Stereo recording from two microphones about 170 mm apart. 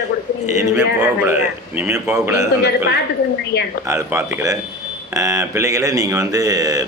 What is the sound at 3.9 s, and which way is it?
A man's voice, 20° right (ahead or behind).